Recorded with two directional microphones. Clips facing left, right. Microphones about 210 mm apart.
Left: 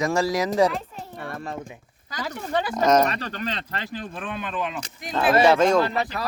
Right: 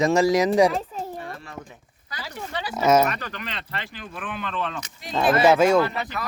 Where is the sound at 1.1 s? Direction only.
60° left (ahead or behind).